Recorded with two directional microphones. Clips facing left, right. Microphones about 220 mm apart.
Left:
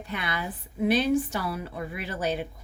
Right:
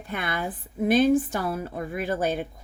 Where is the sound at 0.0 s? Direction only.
50° right (ahead or behind).